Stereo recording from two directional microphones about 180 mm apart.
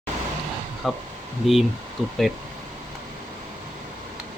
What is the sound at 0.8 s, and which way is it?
Speech, centre (ahead or behind).